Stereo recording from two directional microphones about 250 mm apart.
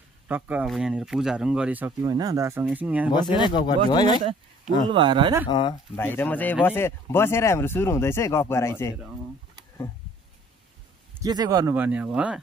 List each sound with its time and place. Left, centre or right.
0.3 s speech: centre
3.1 s speech: centre
4.2 s speech: right
5.5 s speech: centre
11.2 s speech: centre